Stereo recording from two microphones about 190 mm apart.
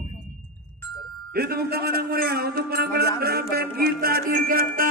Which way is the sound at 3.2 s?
55° right (ahead or behind).